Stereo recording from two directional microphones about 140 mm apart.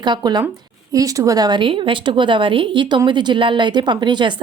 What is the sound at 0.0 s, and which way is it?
Speech, 30° right (ahead or behind).